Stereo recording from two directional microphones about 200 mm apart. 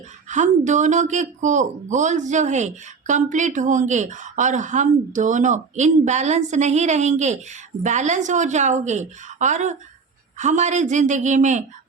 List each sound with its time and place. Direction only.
0.3 s speech: 35° right (ahead or behind)